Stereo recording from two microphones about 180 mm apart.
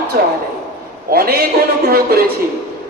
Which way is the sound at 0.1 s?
55° right (ahead or behind).